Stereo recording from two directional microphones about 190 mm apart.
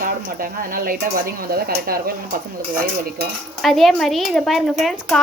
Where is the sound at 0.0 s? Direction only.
50° right (ahead or behind).